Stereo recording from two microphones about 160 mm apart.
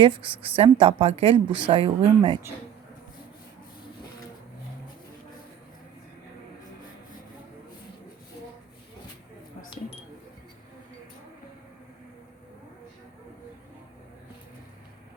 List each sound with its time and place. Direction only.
0.0 s a woman's voice: 35° right (ahead or behind)